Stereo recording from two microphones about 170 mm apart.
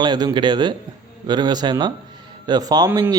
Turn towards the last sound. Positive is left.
turn(degrees=-25)  # may be behind; listen again after turning